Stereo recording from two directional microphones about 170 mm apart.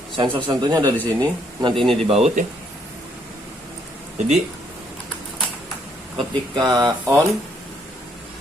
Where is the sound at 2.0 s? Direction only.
40° right (ahead or behind).